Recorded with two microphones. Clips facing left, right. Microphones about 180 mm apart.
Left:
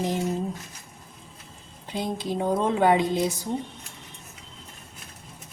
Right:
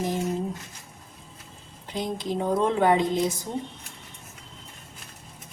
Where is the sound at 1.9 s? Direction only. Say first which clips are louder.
Even; 10° left (ahead or behind).